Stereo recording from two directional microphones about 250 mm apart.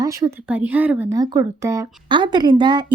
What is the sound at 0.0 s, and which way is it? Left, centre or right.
Speech, centre.